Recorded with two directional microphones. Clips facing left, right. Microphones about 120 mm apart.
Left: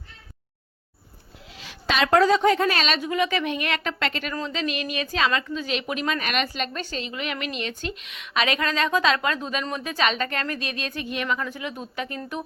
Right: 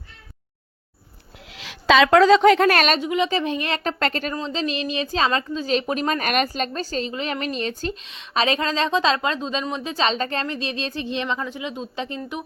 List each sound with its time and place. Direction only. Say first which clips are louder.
1.5 s a woman's voice: right 9 dB; 90° right; by 3.0 s 55° right (ahead or behind)
3.0 s a woman's voice: right 2 dB; 25° right (ahead or behind); by 4.4 s 40° right (ahead or behind)
4.4 s a woman's voice: right 2 dB; 30° right (ahead or behind)